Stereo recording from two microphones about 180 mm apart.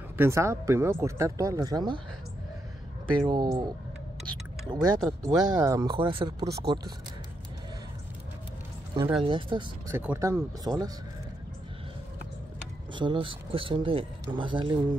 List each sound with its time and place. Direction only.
0.2 s speech: 15° right (ahead or behind)
3.3 s speech: 25° right (ahead or behind)
9.2 s speech: 30° right (ahead or behind)
9.8 s speech: 15° right (ahead or behind)
12.9 s speech: 25° right (ahead or behind)